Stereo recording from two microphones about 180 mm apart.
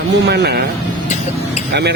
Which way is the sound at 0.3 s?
65° right (ahead or behind).